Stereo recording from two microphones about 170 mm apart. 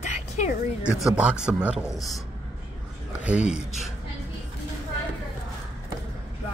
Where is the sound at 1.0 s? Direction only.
5° right (ahead or behind).